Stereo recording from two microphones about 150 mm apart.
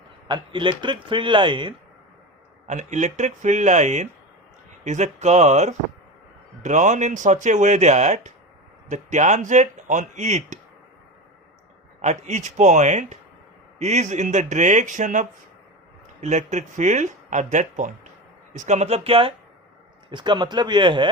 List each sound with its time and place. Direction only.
0.3 s speech: 30° right (ahead or behind)
2.6 s speech: 50° right (ahead or behind)
12.0 s speech: 55° right (ahead or behind); by 21.1 s 30° right (ahead or behind)